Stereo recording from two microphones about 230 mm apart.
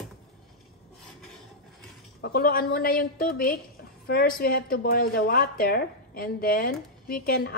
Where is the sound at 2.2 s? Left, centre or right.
Left.